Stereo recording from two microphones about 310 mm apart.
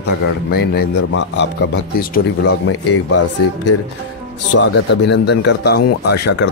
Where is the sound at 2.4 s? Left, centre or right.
Left.